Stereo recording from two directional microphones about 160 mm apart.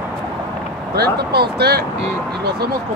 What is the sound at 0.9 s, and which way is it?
Speech, 80° right.